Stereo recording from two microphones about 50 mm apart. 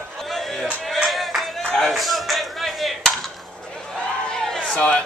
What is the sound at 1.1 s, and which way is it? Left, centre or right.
Clapping, centre.